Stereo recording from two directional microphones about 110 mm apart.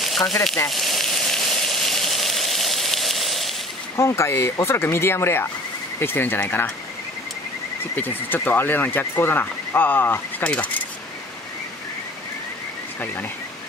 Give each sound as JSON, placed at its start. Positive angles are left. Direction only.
{"t": 0.0, "sound": "frying", "side_deg": 0}
{"t": 3.9, "sound": "speech", "side_deg": 25}
{"t": 8.3, "sound": "speech", "side_deg": 15}
{"t": 13.0, "sound": "speech", "side_deg": 20}